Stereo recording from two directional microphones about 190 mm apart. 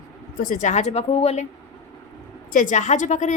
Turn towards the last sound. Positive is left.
turn(degrees=40)  # may be behind; listen again after turning